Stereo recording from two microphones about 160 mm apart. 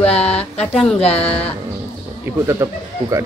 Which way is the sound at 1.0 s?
40° left (ahead or behind).